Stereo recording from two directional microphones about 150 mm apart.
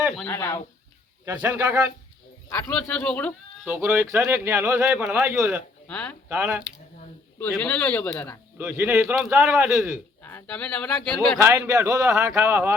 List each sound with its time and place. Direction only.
0.3 s speech: 20° left (ahead or behind)
1.2 s a man's voice: 15° right (ahead or behind)
2.5 s speech: 10° left (ahead or behind)
3.7 s a man's voice: 15° right (ahead or behind)
5.9 s speech: 10° left (ahead or behind)
6.2 s a man's voice: 10° right (ahead or behind)
7.5 s speech: 10° left (ahead or behind)
8.5 s a man's voice: 10° right (ahead or behind)
10.2 s speech: 10° left (ahead or behind)
11.3 s a man's voice: 20° right (ahead or behind)
11.9 s a man's voice: 5° right (ahead or behind)
12.2 s a man's voice: 15° right (ahead or behind)